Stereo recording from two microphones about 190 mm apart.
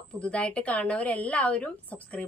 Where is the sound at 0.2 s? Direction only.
5° left (ahead or behind).